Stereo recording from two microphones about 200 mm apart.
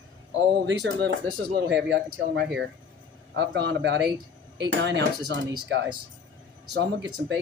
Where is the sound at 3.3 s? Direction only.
60° right (ahead or behind).